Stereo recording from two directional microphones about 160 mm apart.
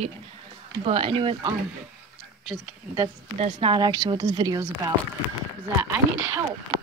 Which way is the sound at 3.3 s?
45° right (ahead or behind).